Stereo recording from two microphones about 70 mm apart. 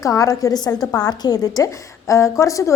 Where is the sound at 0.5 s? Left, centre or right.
Left.